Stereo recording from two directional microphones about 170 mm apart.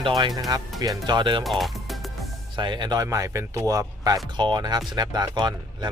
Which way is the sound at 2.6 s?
25° right (ahead or behind).